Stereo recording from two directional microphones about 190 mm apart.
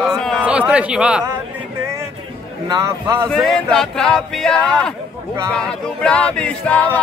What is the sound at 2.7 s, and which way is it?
Speech, 15° right (ahead or behind).